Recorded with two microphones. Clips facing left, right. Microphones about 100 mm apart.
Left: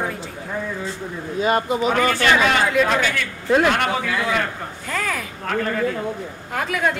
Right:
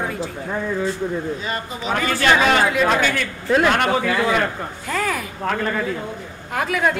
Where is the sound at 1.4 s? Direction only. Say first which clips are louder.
Left 8 dB; 50° left (ahead or behind).